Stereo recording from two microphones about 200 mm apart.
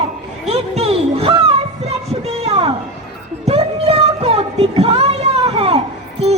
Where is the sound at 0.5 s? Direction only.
30° right (ahead or behind).